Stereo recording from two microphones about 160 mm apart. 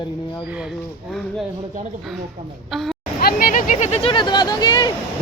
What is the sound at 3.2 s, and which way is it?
Speech, 65° left (ahead or behind).